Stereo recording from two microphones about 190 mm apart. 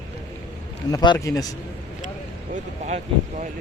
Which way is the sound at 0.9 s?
20° left (ahead or behind).